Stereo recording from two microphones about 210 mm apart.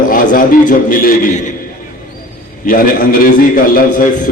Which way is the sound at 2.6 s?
40° left (ahead or behind).